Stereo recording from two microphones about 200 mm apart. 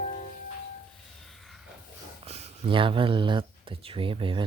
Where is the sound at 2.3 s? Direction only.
30° right (ahead or behind).